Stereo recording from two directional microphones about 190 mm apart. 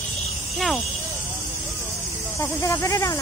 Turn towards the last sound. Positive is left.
turn(degrees=15)  # may be behind; listen again after turning